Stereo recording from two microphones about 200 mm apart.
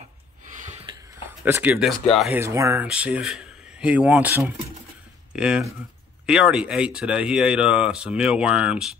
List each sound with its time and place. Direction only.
0.7 s a sound: 30° right (ahead or behind)
1.4 s speech: 10° right (ahead or behind)
2.4 s speech: 15° right (ahead or behind)